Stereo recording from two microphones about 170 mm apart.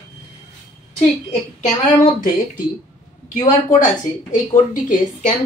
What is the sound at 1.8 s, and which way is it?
Speech, 45° left (ahead or behind).